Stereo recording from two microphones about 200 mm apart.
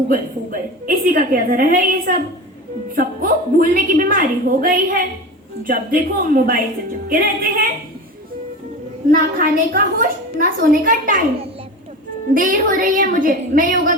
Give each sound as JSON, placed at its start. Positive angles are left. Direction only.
{"t": 0.1, "sound": "a woman's voice", "side_deg": -45}
{"t": 9.0, "sound": "a woman's voice", "side_deg": -45}
{"t": 12.3, "sound": "a woman's voice", "side_deg": -45}